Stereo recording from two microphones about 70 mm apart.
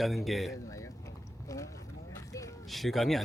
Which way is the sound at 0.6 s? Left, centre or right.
Left.